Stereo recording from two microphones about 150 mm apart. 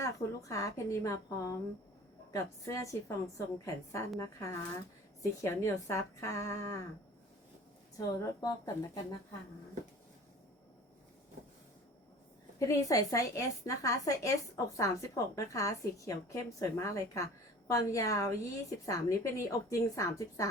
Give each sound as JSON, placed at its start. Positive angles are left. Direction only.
{"t": 0.0, "sound": "a woman's voice", "side_deg": 20}
{"t": 7.9, "sound": "a woman's voice", "side_deg": 25}
{"t": 12.5, "sound": "a woman's voice", "side_deg": 20}